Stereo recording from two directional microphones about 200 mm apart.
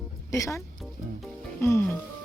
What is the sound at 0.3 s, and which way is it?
Speech, 15° left (ahead or behind).